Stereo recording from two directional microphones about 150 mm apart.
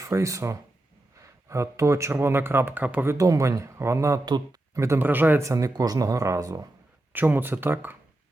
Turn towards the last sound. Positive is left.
turn(degrees=-15)  # may be behind; listen again after turning